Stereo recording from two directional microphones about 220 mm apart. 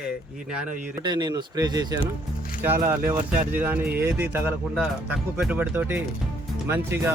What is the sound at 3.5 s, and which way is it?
Speech, 10° right (ahead or behind).